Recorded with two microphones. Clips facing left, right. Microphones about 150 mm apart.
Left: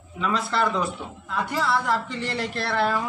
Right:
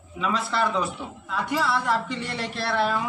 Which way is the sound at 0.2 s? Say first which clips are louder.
Left 1 dB; centre (ahead or behind).